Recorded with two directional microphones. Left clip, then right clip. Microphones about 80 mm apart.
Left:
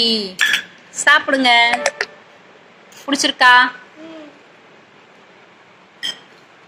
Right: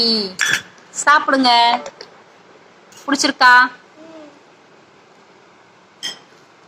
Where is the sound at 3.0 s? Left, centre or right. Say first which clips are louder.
Even; centre.